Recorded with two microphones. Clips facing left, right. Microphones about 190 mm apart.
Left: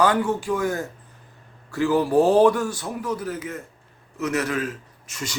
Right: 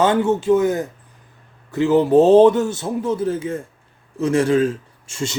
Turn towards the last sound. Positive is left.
turn(degrees=-30)  # may be behind; listen again after turning